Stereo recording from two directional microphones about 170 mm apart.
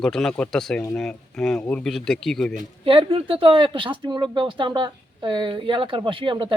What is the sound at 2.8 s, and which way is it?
Speech, 30° right (ahead or behind).